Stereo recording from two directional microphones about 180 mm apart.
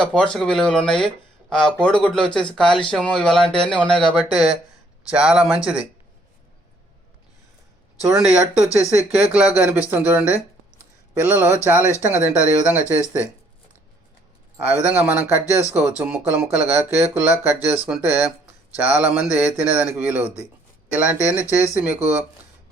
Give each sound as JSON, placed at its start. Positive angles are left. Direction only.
{"t": 0.0, "sound": "speech", "side_deg": 5}
{"t": 8.6, "sound": "speech", "side_deg": 15}
{"t": 9.0, "sound": "speech", "side_deg": -5}
{"t": 14.7, "sound": "speech", "side_deg": -10}
{"t": 21.3, "sound": "speech", "side_deg": 15}
{"t": 21.8, "sound": "speech", "side_deg": -10}